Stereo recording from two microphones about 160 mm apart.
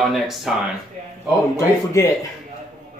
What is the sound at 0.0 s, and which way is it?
Speech, centre (ahead or behind).